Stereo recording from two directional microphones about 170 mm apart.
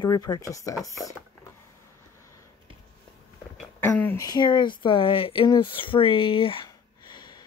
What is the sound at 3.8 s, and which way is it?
Speech, 10° left (ahead or behind).